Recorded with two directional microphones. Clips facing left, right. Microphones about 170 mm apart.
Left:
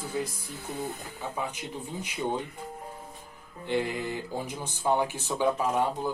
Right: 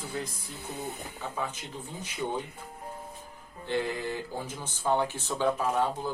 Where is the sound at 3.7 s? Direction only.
15° left (ahead or behind).